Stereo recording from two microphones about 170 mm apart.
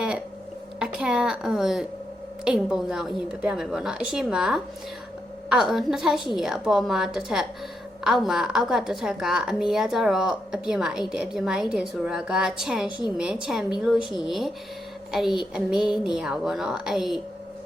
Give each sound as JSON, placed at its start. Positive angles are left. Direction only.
{"t": 0.8, "sound": "a woman's voice", "side_deg": -5}